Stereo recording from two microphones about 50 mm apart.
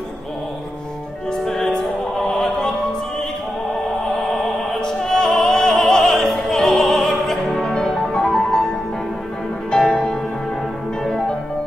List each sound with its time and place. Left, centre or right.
1.4 s music: centre
4.8 s opera: centre
9.7 s music: centre